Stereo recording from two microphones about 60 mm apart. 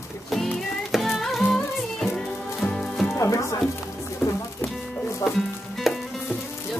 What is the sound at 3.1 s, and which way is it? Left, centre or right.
Music, left.